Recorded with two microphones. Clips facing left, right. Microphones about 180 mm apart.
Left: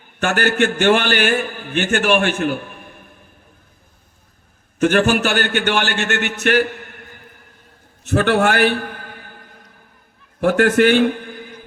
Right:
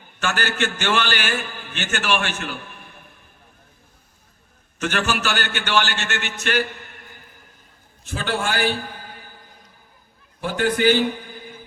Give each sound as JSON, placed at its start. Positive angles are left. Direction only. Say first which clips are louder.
{"t": 0.2, "sound": "a man's voice", "louder": "left 7 dB", "side_deg": 55}
{"t": 4.8, "sound": "a man's voice", "louder": "left 9 dB", "side_deg": 50}
{"t": 8.0, "sound": "a sound", "louder": "left 10 dB", "side_deg": 65}
{"t": 10.4, "sound": "a man's voice", "louder": "left 6 dB", "side_deg": 75}